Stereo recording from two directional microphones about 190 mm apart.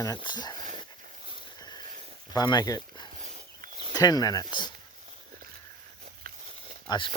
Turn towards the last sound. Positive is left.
turn(degrees=25)  # may be behind; listen again after turning